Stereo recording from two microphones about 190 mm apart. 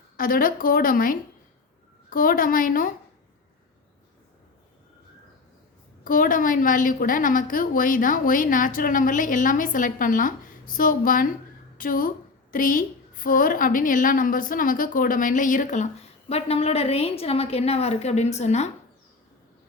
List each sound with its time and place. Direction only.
0.2 s a woman's voice: 50° left (ahead or behind)
6.1 s a woman's voice: 45° left (ahead or behind)